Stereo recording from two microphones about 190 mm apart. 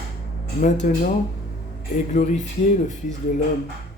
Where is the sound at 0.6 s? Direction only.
40° left (ahead or behind).